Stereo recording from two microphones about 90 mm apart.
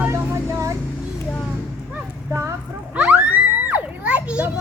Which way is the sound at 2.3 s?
30° right (ahead or behind).